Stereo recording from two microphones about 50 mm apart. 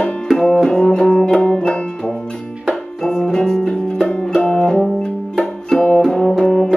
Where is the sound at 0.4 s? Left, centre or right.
Centre.